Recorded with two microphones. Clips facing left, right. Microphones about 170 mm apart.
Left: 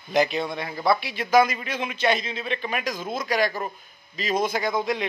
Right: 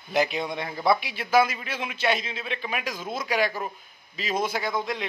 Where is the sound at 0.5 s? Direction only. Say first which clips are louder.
Right 1 dB; 20° right (ahead or behind).